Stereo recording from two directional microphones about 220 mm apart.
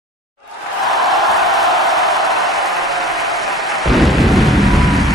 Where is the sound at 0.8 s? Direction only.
Centre (ahead or behind).